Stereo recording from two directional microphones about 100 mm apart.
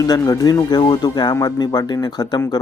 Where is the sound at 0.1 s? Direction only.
35° left (ahead or behind).